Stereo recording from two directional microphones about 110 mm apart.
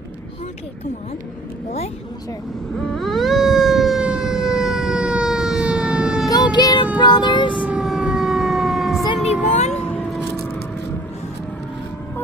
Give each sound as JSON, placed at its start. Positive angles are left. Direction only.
{"t": 2.8, "sound": "emergency vehicle", "side_deg": 5}
{"t": 6.2, "sound": "child singing", "side_deg": 40}
{"t": 7.0, "sound": "music", "side_deg": 40}
{"t": 7.5, "sound": "siren", "side_deg": -10}
{"t": 9.2, "sound": "music", "side_deg": 90}
{"t": 9.7, "sound": "a sound", "side_deg": 10}